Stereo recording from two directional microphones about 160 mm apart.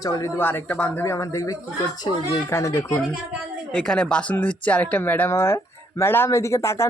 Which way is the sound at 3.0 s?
5° right (ahead or behind).